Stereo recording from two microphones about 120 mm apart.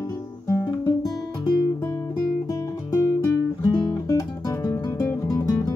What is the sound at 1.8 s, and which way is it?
Guitar, 35° left (ahead or behind).